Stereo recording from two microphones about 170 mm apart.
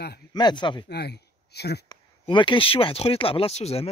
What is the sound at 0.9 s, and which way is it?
Speech, 75° left (ahead or behind).